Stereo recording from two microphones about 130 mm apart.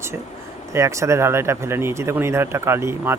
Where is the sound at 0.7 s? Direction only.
25° right (ahead or behind).